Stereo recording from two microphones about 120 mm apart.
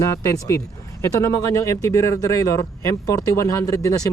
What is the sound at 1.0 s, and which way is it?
Speech, 25° left (ahead or behind).